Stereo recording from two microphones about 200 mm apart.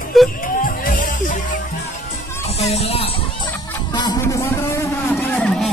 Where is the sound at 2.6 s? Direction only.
30° left (ahead or behind).